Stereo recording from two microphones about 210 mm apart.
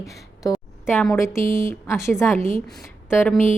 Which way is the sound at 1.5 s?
40° left (ahead or behind).